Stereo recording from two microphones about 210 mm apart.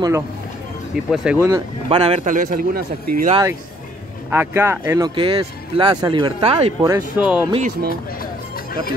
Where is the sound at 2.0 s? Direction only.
30° right (ahead or behind).